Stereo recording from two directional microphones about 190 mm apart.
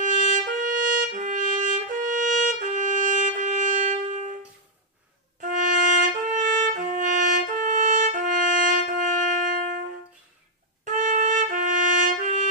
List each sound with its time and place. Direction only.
0.3 s trumpet: 45° right (ahead or behind)
5.4 s music: 40° right (ahead or behind)
10.9 s trumpet: 40° right (ahead or behind)